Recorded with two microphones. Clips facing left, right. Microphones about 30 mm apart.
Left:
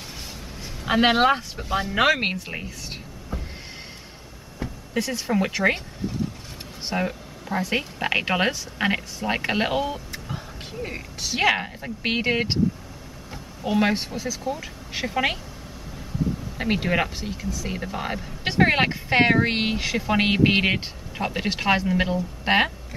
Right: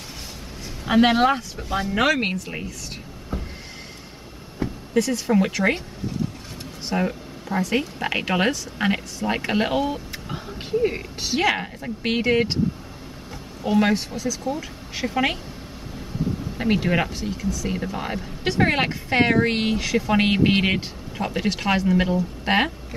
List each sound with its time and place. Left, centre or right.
0.8 s speech: centre
4.9 s speech: centre
6.9 s a sound: centre
7.6 s speech: centre
11.3 s speech: centre
13.7 s speech: centre
13.9 s speech: centre
14.4 s speech: centre
16.5 s speech: centre